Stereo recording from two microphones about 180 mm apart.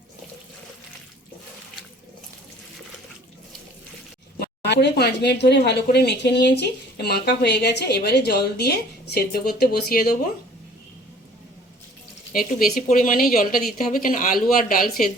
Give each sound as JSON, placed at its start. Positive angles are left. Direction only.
{"t": 4.4, "sound": "speech", "side_deg": 70}
{"t": 12.3, "sound": "a woman's voice", "side_deg": 50}